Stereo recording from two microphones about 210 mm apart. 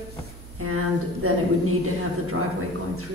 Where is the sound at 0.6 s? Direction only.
90° right.